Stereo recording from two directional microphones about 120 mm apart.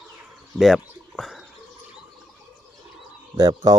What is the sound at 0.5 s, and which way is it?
Bird, centre (ahead or behind).